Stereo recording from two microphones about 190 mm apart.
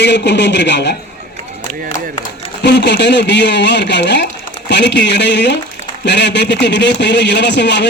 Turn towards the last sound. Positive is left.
turn(degrees=65)  # may be behind; listen again after turning